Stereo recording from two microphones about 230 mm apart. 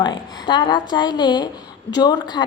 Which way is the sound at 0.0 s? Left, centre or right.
Centre.